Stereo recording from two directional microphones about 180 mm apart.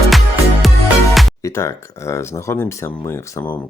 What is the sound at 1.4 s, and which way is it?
Speech, 15° left (ahead or behind).